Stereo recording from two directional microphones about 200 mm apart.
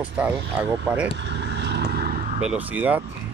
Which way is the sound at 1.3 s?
60° right (ahead or behind).